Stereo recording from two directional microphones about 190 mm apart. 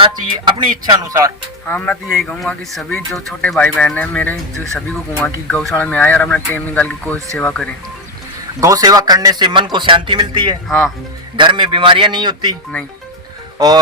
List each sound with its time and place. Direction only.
0.0 s speech: 25° right (ahead or behind)
1.6 s speech: 5° left (ahead or behind)
8.6 s speech: 20° right (ahead or behind)
10.7 s speech: centre (ahead or behind)
11.3 s speech: 25° right (ahead or behind)